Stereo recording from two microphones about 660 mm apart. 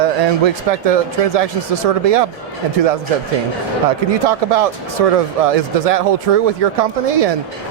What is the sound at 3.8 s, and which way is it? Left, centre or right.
Speech, right.